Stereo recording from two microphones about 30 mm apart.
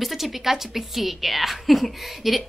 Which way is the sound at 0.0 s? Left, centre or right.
Centre.